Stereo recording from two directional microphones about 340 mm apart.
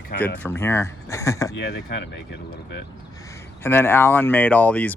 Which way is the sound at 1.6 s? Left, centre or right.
Left.